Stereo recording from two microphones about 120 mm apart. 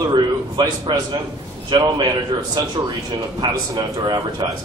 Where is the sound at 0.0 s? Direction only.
35° right (ahead or behind).